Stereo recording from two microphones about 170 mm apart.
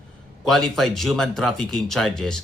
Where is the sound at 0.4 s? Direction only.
Centre (ahead or behind).